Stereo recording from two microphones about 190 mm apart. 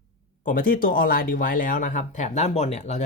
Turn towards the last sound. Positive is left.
turn(degrees=35)  # may be behind; listen again after turning